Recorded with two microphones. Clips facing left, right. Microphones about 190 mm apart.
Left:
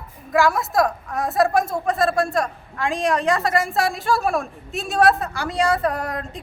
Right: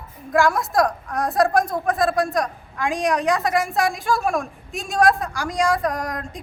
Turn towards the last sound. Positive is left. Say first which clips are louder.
# left 1 dB
turn(degrees=5)  # may be behind; listen again after turning